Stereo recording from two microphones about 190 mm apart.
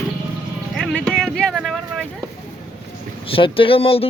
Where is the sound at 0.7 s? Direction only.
Centre (ahead or behind).